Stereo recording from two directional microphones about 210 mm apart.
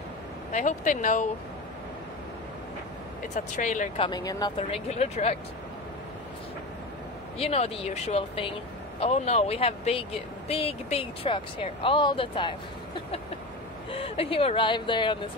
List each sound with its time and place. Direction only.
0.5 s speech: 35° left (ahead or behind)
3.3 s speech: 35° left (ahead or behind); by 4.5 s 20° left (ahead or behind)
4.6 s speech: 30° left (ahead or behind)
7.3 s speech: 30° left (ahead or behind)
13.9 s speech: 25° left (ahead or behind)